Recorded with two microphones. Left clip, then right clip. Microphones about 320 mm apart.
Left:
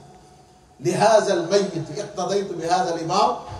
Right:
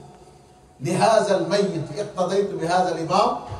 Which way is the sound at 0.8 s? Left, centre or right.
Right.